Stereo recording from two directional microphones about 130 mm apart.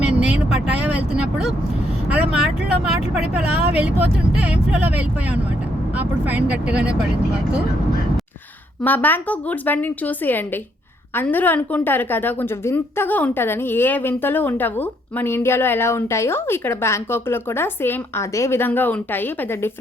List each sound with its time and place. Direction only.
0.0 s vehicle: 10° right (ahead or behind)
2.0 s speech: 10° right (ahead or behind)
8.8 s a woman's voice: 15° left (ahead or behind)